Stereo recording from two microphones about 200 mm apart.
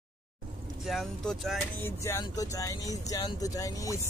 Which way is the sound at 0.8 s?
Centre (ahead or behind).